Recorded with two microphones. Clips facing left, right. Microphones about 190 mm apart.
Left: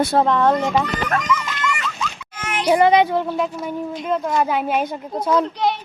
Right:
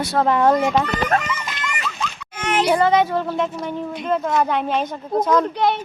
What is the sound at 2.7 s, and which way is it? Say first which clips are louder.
Speech: left 5 dB; 15° left (ahead or behind).